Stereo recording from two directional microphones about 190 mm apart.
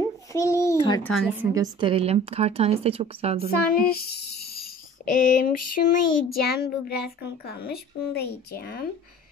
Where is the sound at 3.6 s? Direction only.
55° left (ahead or behind).